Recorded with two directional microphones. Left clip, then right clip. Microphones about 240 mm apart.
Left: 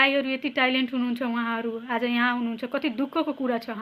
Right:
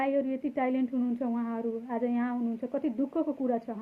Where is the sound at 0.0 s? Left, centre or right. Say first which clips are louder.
Left 7 dB; centre.